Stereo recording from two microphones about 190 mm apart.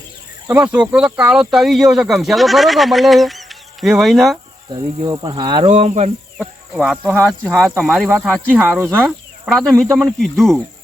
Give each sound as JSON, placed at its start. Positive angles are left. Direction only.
{"t": 0.4, "sound": "speech", "side_deg": -10}
{"t": 4.7, "sound": "speech", "side_deg": -25}
{"t": 5.7, "sound": "speech", "side_deg": -35}
{"t": 6.4, "sound": "speech", "side_deg": 0}